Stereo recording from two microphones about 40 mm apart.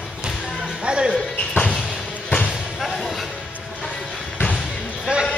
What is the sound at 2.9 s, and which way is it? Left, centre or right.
Music, centre.